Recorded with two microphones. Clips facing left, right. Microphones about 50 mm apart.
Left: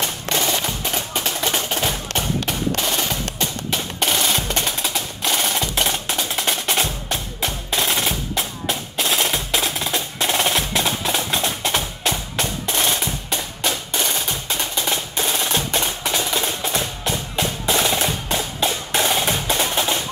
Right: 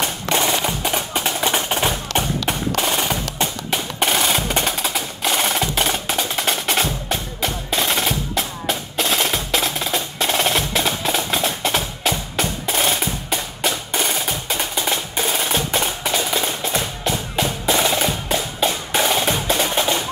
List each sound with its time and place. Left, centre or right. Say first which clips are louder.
0.3 s music: right 3 dB; right
2.7 s percussion: right 2 dB; right
14.9 s music: right 1 dB; centre